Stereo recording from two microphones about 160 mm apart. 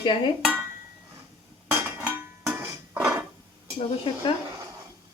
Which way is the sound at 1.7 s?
10° right (ahead or behind).